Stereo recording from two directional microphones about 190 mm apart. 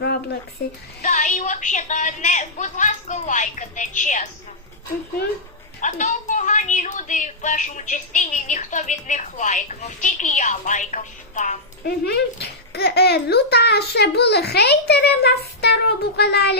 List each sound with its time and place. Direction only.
0.0 s a sound: 60° left (ahead or behind)
1.0 s a woman's voice: 40° left (ahead or behind)
5.8 s a woman's voice: 40° left (ahead or behind)
11.9 s a child's voice: 60° left (ahead or behind)